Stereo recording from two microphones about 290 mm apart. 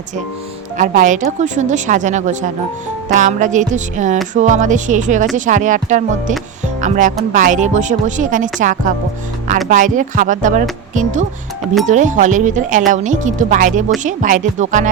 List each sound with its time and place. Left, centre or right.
0.8 s a woman's voice: right